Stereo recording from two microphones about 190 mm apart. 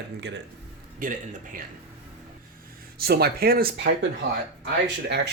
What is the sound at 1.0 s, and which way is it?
Speech, 45° right (ahead or behind).